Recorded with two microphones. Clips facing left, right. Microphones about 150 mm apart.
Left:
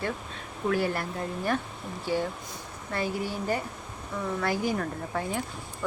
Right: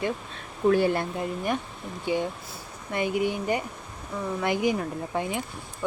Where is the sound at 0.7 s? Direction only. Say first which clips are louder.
Right 6 dB; 25° right (ahead or behind).